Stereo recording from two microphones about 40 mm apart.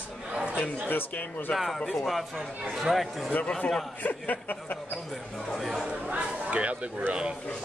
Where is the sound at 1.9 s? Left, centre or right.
Centre.